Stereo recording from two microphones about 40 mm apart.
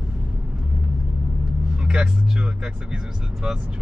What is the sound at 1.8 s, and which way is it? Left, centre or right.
Speech, right.